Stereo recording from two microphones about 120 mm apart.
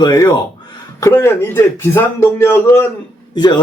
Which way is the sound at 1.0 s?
25° left (ahead or behind).